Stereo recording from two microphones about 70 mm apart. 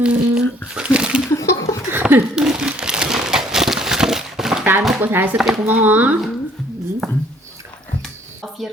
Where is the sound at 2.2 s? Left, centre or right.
Centre.